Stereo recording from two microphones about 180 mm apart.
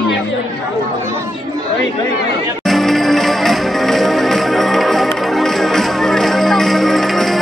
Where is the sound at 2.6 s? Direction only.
Centre (ahead or behind).